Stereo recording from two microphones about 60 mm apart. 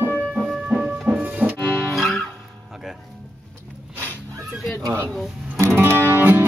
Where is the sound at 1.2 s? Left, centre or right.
Right.